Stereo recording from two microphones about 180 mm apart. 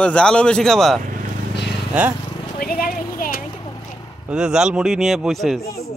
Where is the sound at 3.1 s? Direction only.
50° left (ahead or behind).